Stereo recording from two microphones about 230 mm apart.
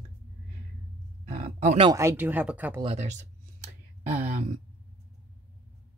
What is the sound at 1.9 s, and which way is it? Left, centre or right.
Speech, centre.